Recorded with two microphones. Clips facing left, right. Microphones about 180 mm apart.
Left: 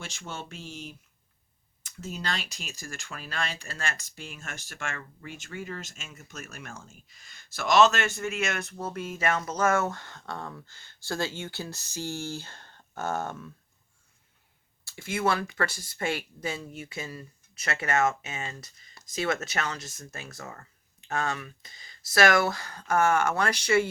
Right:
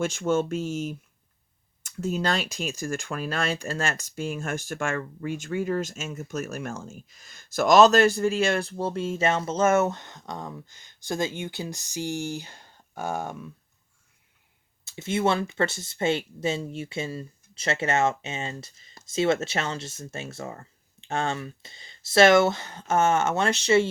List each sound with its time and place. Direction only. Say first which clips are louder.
0.0 s speech: right 16 dB; 50° right (ahead or behind); by 13.5 s 15° right (ahead or behind)
14.8 s speech: right 3 dB; 25° right (ahead or behind)